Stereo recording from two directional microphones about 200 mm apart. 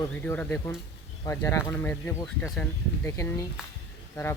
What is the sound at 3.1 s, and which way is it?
Speech, 15° left (ahead or behind).